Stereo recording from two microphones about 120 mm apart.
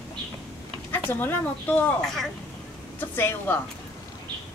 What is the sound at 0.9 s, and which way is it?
A woman's voice, 15° left (ahead or behind).